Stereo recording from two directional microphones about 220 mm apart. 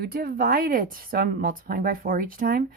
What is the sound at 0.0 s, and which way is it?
Speech, 45° right (ahead or behind).